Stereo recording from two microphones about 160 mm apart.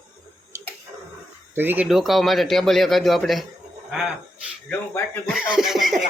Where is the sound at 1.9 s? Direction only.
Centre (ahead or behind).